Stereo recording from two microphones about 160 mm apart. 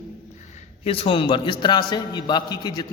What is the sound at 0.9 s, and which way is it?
A man's voice, 35° left (ahead or behind).